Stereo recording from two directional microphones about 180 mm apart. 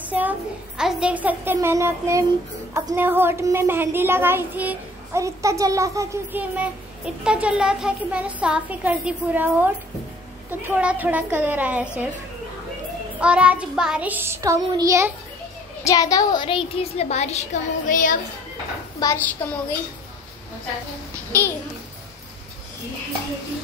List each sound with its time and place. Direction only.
0.0 s a sound: 10° right (ahead or behind)
0.7 s a woman's voice: 5° right (ahead or behind)
13.2 s a woman's voice: 5° right (ahead or behind)
15.8 s speech: 20° left (ahead or behind); by 18.1 s 45° left (ahead or behind)
19.0 s a woman's voice: 20° left (ahead or behind)
21.3 s a child's voice: 10° left (ahead or behind)